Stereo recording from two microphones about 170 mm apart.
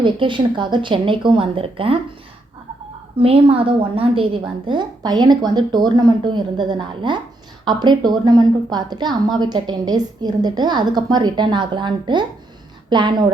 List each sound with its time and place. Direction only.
0.0 s a woman's voice: 30° right (ahead or behind)
3.2 s a woman's voice: 35° right (ahead or behind)